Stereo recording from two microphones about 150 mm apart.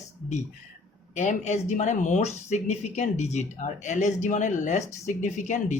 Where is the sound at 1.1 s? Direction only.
50° left (ahead or behind).